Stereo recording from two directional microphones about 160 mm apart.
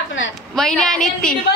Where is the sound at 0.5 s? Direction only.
5° left (ahead or behind).